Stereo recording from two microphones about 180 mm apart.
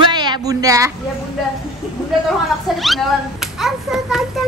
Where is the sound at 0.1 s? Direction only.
25° right (ahead or behind).